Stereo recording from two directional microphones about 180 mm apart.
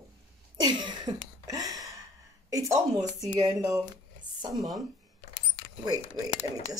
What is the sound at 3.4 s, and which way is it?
Speech, 20° right (ahead or behind).